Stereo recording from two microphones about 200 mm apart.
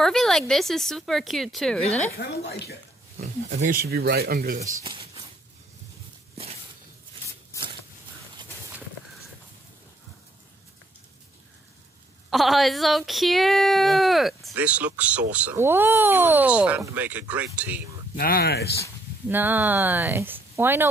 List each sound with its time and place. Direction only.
0.0 s speech: centre (ahead or behind)
1.8 s speech: 35° left (ahead or behind)
3.2 s speech: 35° right (ahead or behind)
12.3 s speech: centre (ahead or behind)
18.1 s speech: 50° left (ahead or behind)
19.2 s speech: 10° right (ahead or behind)